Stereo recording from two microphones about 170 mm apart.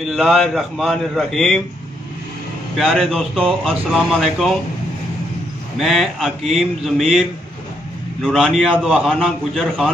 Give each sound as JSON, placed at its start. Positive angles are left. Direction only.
{"t": 0.1, "sound": "speech", "side_deg": 0}
{"t": 2.8, "sound": "speech", "side_deg": 0}
{"t": 5.8, "sound": "speech", "side_deg": 0}